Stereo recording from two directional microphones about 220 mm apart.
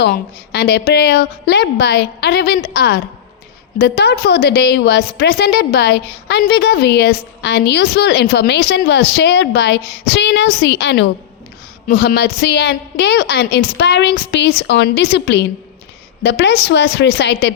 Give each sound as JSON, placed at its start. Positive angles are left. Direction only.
{"t": 0.0, "sound": "a woman's voice", "side_deg": 50}